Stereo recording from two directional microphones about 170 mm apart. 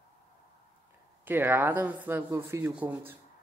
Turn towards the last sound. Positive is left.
turn(degrees=-10)  # may be behind; listen again after turning